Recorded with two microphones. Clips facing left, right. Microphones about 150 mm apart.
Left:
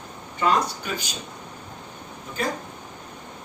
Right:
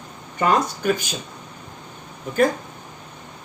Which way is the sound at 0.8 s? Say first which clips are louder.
Right 10 dB; 55° right (ahead or behind).